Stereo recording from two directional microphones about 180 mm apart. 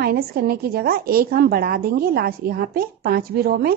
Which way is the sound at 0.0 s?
60° right (ahead or behind).